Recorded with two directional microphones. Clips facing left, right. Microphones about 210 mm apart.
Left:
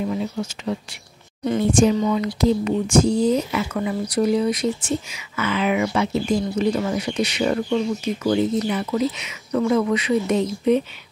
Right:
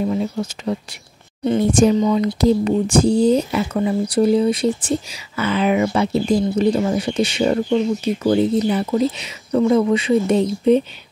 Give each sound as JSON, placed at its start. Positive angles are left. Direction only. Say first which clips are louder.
{"t": 0.0, "sound": "speech", "louder": "right 4 dB", "side_deg": -35}